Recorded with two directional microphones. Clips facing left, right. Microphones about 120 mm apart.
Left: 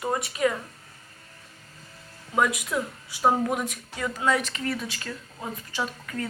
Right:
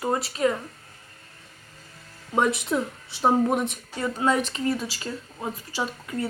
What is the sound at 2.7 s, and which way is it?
A woman's voice, 25° right (ahead or behind).